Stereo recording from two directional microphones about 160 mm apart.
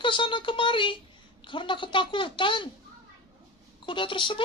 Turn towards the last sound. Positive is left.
turn(degrees=30)  # may be behind; listen again after turning